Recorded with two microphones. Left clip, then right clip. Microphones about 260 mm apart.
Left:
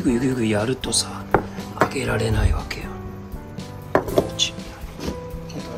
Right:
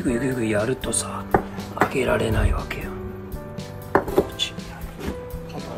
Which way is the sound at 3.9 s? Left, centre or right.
Centre.